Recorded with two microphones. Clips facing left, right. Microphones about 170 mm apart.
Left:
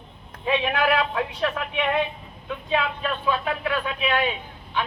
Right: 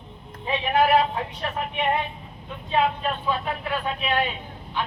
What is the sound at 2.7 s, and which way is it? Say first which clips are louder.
Speech: right 2 dB; 75° left (ahead or behind).